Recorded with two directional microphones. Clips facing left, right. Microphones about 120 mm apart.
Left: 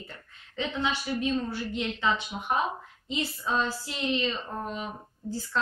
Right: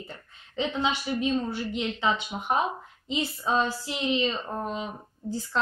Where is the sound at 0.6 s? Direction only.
20° right (ahead or behind).